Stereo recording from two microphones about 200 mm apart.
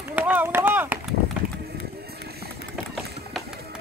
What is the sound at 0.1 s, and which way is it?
Run, 10° right (ahead or behind).